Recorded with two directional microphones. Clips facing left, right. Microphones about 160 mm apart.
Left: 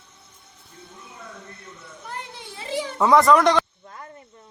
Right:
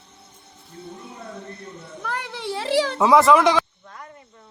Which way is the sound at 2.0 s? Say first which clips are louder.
Right 8 dB; 85° right.